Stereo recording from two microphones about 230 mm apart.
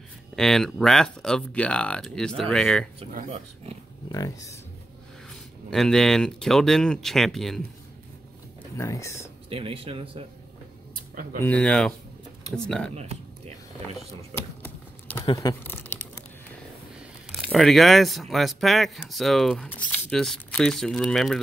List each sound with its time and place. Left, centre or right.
0.4 s speech: centre
3.0 s speech: right
4.1 s speech: centre
5.3 s speech: centre
8.7 s speech: centre
9.5 s speech: right
11.3 s speech: centre
12.9 s speech: right
14.3 s a sound: centre
17.5 s speech: centre